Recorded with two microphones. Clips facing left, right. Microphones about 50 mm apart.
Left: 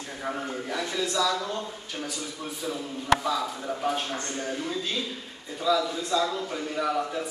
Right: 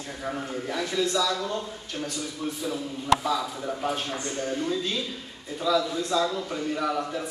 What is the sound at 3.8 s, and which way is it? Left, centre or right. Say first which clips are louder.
A man's voice: left 1 dB; centre.